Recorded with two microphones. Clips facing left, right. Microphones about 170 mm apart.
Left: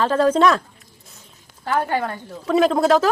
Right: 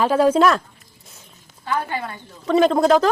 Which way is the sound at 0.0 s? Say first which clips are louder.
Right 1 dB; 10° right (ahead or behind).